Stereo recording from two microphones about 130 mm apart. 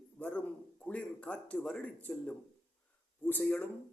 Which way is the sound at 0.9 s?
10° left (ahead or behind).